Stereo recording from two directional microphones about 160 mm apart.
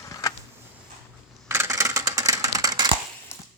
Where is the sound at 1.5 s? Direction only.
15° right (ahead or behind).